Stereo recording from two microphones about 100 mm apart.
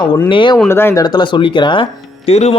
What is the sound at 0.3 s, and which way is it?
Speech, 55° left (ahead or behind).